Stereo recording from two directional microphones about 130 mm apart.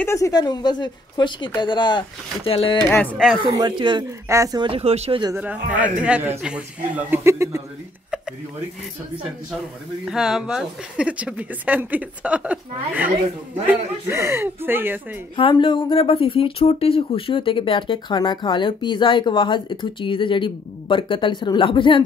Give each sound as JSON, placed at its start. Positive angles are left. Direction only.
{"t": 0.0, "sound": "speech", "side_deg": 25}
{"t": 2.8, "sound": "speech", "side_deg": 10}
{"t": 3.4, "sound": "speech", "side_deg": -35}
{"t": 4.3, "sound": "speech", "side_deg": -25}
{"t": 4.6, "sound": "speech", "side_deg": -45}
{"t": 5.3, "sound": "speech", "side_deg": -10}
{"t": 7.1, "sound": "speech", "side_deg": -20}
{"t": 10.0, "sound": "speech", "side_deg": -5}
{"t": 15.3, "sound": "speech", "side_deg": 40}